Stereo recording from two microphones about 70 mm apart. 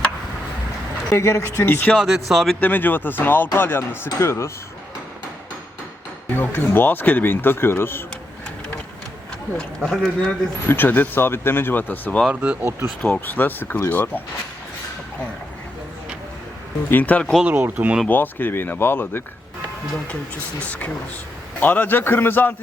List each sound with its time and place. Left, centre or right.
1.1 s speech: left
2.0 s speech: centre
2.6 s speech: left
6.3 s speech: left
9.6 s speech: centre
10.7 s speech: left
12.3 s speech: right
13.0 s speech: left
16.9 s speech: left
17.4 s speech: right
18.1 s speech: left
20.6 s speech: left